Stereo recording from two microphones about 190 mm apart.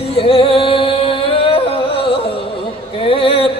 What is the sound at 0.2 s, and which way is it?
Music, 30° left (ahead or behind).